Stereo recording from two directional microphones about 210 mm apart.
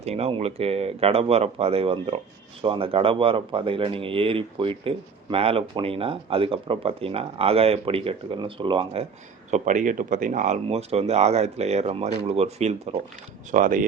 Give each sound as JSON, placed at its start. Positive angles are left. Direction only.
{"t": 0.0, "sound": "speech", "side_deg": -30}
{"t": 9.5, "sound": "speech", "side_deg": -35}